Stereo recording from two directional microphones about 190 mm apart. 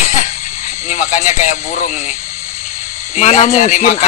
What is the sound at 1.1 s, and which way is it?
Speech, 40° left (ahead or behind).